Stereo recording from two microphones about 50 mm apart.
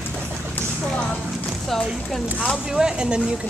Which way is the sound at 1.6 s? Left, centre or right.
Centre.